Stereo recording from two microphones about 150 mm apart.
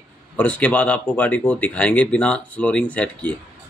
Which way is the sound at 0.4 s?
10° left (ahead or behind).